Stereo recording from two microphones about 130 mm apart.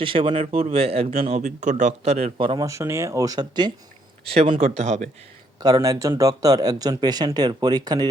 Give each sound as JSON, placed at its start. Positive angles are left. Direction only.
{"t": 0.0, "sound": "speech", "side_deg": -40}
{"t": 1.4, "sound": "speech", "side_deg": -70}
{"t": 2.6, "sound": "speech", "side_deg": -20}
{"t": 4.3, "sound": "speech", "side_deg": -45}
{"t": 4.6, "sound": "speech", "side_deg": -60}
{"t": 5.5, "sound": "speech", "side_deg": -30}